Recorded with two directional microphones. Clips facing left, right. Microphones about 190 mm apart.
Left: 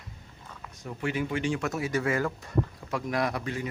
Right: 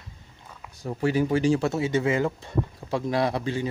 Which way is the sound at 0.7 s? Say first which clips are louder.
Right 7 dB; 35° right (ahead or behind).